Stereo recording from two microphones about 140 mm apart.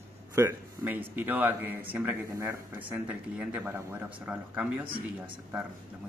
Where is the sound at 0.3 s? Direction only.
20° right (ahead or behind).